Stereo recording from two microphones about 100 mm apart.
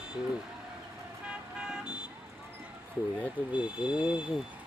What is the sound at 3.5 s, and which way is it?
Speech, 10° right (ahead or behind).